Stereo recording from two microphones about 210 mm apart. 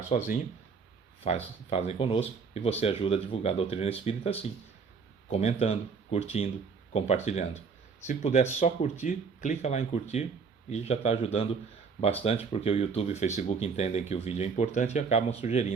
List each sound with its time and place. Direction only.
0.1 s speech: 35° left (ahead or behind)